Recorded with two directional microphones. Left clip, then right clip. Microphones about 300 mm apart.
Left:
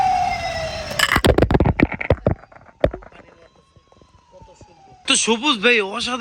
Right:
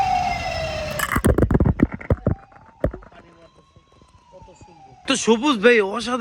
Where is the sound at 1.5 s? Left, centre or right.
Left.